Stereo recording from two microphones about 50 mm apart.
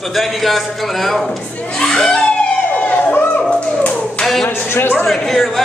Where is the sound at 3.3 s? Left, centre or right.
Left.